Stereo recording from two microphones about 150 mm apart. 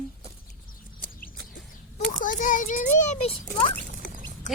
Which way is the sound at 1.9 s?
55° left (ahead or behind).